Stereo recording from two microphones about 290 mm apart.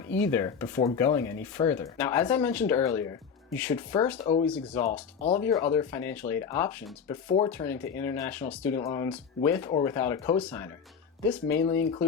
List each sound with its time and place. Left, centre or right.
0.1 s speech: centre